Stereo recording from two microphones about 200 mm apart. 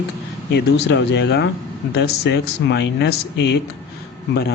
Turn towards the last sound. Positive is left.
turn(degrees=55)  # may be behind; listen again after turning